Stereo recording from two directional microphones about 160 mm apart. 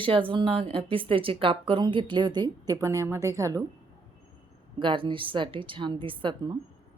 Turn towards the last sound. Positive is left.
turn(degrees=-30)  # may be behind; listen again after turning